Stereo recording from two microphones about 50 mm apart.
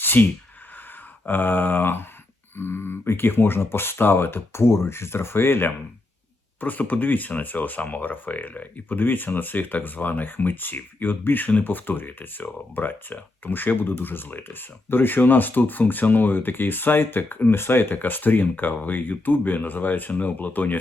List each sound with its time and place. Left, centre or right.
0.0 s a sound: left
1.3 s speech: left
6.6 s speech: left